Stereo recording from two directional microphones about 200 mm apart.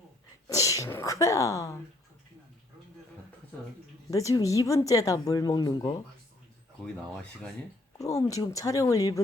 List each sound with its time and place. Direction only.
0.4 s speech: 15° left (ahead or behind)
4.1 s a woman's voice: 15° left (ahead or behind)
7.9 s a woman's voice: 15° left (ahead or behind)